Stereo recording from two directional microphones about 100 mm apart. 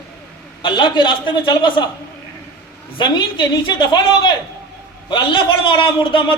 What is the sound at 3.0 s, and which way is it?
A woman's voice, 55° left (ahead or behind).